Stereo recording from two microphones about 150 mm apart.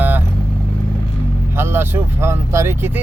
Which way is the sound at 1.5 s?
15° right (ahead or behind).